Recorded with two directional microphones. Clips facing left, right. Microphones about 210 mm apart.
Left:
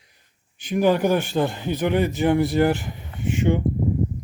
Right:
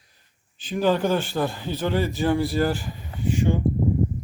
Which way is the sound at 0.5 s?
15° left (ahead or behind).